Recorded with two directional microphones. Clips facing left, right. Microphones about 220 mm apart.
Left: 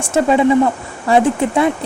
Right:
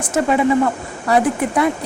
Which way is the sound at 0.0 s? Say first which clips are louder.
Left 3 dB; 25° left (ahead or behind).